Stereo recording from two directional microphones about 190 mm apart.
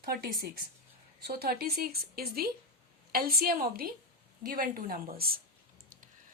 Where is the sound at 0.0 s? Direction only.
55° right (ahead or behind).